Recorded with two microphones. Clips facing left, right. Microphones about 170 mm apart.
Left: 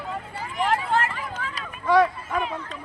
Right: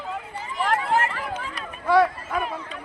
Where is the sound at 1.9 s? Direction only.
10° right (ahead or behind).